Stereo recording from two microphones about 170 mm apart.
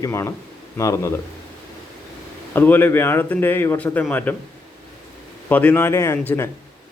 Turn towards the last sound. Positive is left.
turn(degrees=15)  # may be behind; listen again after turning